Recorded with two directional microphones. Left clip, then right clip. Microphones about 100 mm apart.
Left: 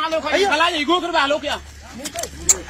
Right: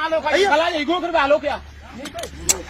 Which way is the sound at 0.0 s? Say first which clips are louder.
Right 1 dB; 65° right (ahead or behind).